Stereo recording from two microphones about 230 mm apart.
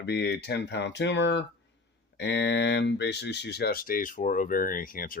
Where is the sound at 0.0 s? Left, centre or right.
Left.